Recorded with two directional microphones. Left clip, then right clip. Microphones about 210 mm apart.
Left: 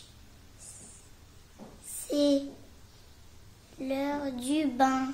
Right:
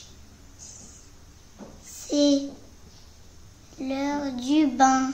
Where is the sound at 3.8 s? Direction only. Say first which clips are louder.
Right 3 dB; 10° left (ahead or behind).